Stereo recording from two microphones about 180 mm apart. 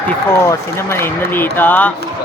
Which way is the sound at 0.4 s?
15° left (ahead or behind).